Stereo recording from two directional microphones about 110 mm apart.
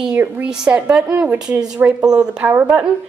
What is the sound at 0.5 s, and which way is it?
A woman's voice, 10° right (ahead or behind).